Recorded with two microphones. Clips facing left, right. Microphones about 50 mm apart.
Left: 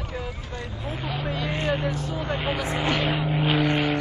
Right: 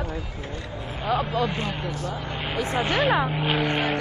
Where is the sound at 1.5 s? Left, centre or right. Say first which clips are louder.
Left 4 dB; left.